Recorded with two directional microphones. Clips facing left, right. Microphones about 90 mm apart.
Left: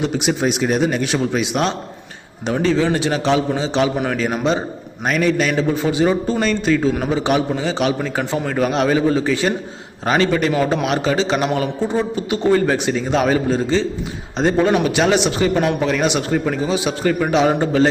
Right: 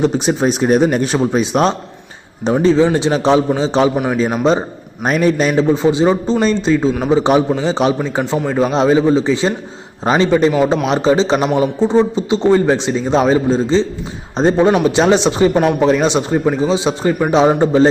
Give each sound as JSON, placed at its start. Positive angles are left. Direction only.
{"t": 0.0, "sound": "a man's voice", "side_deg": -35}
{"t": 3.9, "sound": "a man's voice", "side_deg": -5}
{"t": 5.0, "sound": "a man's voice", "side_deg": -35}